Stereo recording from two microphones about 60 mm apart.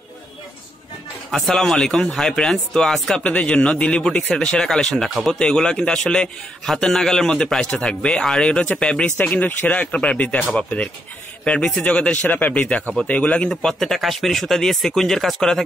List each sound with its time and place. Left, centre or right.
1.3 s speech: centre
5.4 s speech: centre
13.5 s speech: centre